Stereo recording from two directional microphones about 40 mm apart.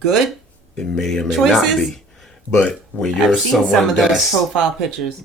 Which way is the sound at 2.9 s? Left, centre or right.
Left.